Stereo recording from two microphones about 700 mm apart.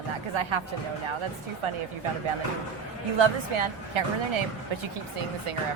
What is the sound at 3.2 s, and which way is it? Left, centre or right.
Speech, right.